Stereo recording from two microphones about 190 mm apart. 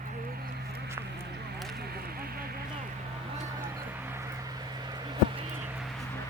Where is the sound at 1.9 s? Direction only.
50° right (ahead or behind).